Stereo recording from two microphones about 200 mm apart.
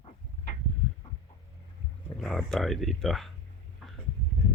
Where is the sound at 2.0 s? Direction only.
Centre (ahead or behind).